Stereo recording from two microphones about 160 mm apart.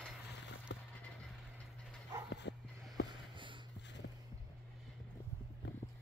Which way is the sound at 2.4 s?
90° left.